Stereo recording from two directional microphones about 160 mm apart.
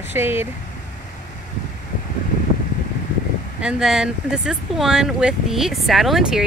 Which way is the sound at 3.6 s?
5° right (ahead or behind).